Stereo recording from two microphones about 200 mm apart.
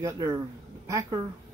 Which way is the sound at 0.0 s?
15° right (ahead or behind).